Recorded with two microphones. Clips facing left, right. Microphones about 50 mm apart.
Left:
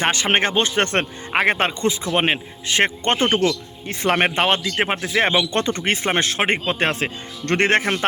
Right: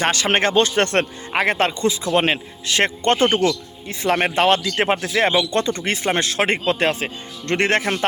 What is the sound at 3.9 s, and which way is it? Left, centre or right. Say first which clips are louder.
Speech: even; left.